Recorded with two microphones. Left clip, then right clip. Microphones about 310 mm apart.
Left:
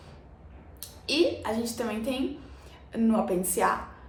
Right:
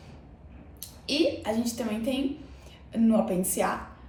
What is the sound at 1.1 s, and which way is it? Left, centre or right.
Speech, centre.